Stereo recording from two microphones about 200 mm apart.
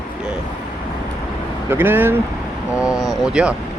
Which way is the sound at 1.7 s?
10° right (ahead or behind).